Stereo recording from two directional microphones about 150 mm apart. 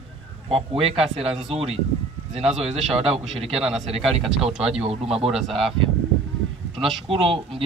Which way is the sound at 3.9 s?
Centre (ahead or behind).